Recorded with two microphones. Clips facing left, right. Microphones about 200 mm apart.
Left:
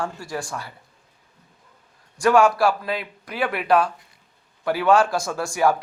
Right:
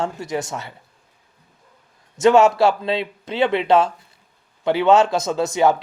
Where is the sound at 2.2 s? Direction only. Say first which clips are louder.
Right 3 dB; 25° right (ahead or behind).